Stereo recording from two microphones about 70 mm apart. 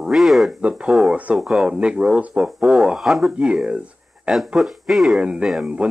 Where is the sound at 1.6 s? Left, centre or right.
Centre.